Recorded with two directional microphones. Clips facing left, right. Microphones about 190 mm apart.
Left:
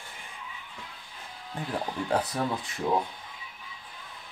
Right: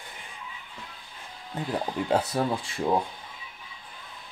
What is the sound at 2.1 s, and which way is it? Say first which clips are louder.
Speech: right 3 dB; 25° right (ahead or behind).